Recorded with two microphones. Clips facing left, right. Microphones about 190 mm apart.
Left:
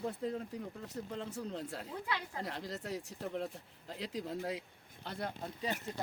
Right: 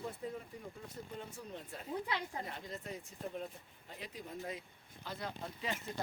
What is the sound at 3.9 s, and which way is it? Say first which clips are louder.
Speech: left 7 dB; 90° left.